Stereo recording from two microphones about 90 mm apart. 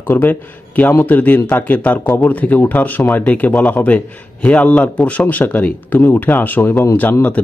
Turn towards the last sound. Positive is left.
turn(degrees=20)  # may be behind; listen again after turning